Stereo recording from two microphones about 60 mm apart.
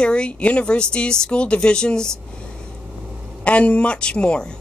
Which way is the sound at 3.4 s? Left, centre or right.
Left.